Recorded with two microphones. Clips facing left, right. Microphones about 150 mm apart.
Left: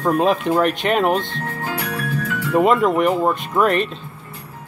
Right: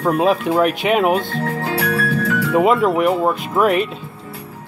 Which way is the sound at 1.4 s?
85° right.